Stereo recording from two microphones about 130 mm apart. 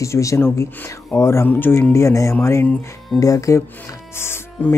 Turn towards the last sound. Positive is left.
turn(degrees=15)  # may be behind; listen again after turning